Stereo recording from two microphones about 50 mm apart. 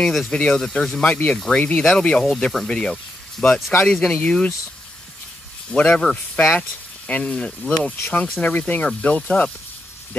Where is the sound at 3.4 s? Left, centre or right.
Left.